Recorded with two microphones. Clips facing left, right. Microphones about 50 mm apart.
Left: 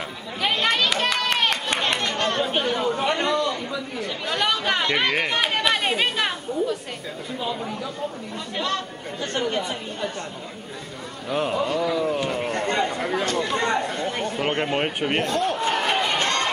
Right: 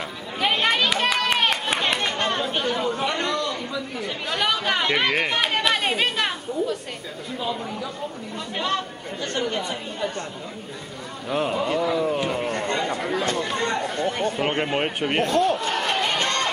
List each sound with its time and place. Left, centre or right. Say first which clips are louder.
0.4 s a sound: right 1 dB; centre
2.4 s chatter: left 1 dB; centre
4.0 s speech: left 1 dB; centre
9.2 s speech: left 1 dB; centre
11.2 s speech: even; centre
15.4 s a sound: even; centre